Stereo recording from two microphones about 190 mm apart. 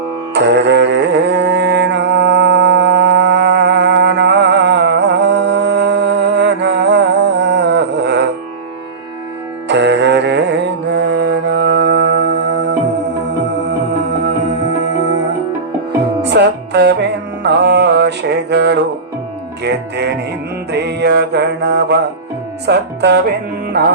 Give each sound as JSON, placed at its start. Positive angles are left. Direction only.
{"t": 0.3, "sound": "music", "side_deg": -65}
{"t": 9.6, "sound": "music", "side_deg": -65}
{"t": 16.2, "sound": "music", "side_deg": -65}
{"t": 23.8, "sound": "music", "side_deg": -50}